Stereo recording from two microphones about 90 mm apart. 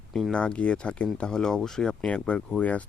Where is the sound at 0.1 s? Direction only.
5° left (ahead or behind).